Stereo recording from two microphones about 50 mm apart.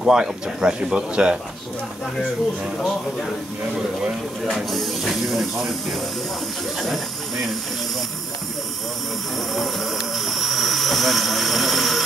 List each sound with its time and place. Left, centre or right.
0.0 s speech: centre
4.6 s speech: centre
10.1 s vehicle: centre